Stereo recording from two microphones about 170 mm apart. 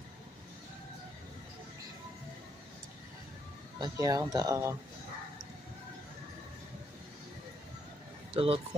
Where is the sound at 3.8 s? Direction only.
20° right (ahead or behind).